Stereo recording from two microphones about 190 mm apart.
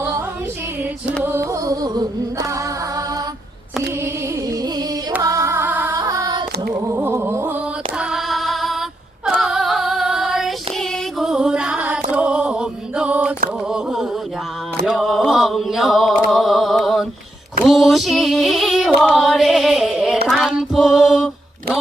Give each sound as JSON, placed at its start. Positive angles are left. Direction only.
{"t": 1.2, "sound": "music", "side_deg": -10}
{"t": 5.1, "sound": "singing", "side_deg": -20}
{"t": 6.7, "sound": "music", "side_deg": -10}
{"t": 7.9, "sound": "female singing", "side_deg": 0}
{"t": 12.1, "sound": "a sound", "side_deg": -5}
{"t": 17.6, "sound": "female singing", "side_deg": 0}
{"t": 20.2, "sound": "music", "side_deg": 0}